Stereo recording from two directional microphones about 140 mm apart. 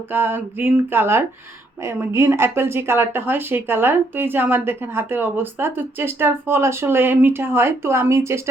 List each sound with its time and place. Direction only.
0.1 s speech: 15° right (ahead or behind)